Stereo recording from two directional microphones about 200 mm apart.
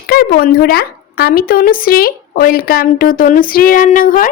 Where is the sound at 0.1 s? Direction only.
50° left (ahead or behind).